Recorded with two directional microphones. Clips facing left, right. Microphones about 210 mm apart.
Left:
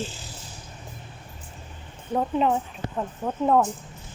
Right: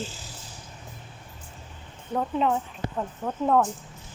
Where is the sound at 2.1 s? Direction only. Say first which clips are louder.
Left 2 dB; 20° left (ahead or behind).